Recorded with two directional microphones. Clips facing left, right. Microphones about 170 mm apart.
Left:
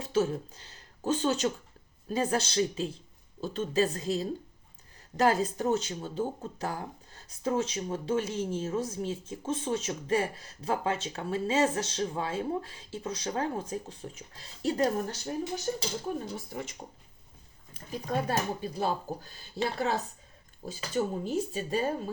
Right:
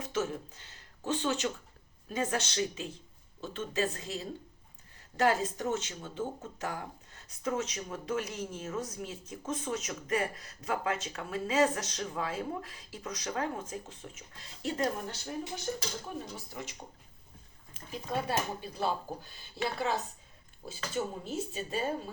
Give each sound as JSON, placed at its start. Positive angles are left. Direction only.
{"t": 0.0, "sound": "speech", "side_deg": 35}
{"t": 16.5, "sound": "speech", "side_deg": 55}
{"t": 19.2, "sound": "speech", "side_deg": 40}